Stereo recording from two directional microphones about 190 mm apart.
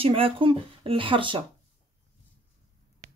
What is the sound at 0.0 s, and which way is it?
Speech, 30° right (ahead or behind).